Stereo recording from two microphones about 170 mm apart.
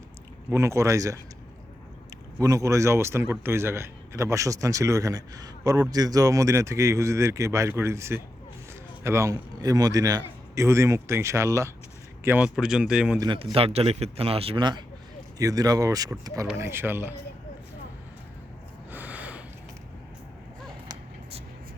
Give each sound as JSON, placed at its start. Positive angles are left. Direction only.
{"t": 0.5, "sound": "speech", "side_deg": -15}
{"t": 2.4, "sound": "a man's voice", "side_deg": -20}
{"t": 13.1, "sound": "speech", "side_deg": -25}
{"t": 18.9, "sound": "gasp", "side_deg": -10}